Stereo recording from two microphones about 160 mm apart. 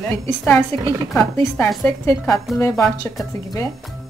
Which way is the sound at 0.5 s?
15° left (ahead or behind).